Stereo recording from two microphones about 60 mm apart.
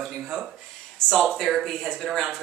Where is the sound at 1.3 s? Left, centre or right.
Centre.